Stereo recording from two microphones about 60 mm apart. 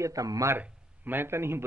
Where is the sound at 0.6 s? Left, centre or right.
Right.